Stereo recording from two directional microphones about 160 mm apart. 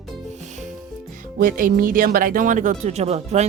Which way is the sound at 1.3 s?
60° right (ahead or behind).